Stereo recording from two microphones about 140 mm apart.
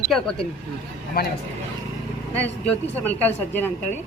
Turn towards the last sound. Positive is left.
turn(degrees=15)  # may be behind; listen again after turning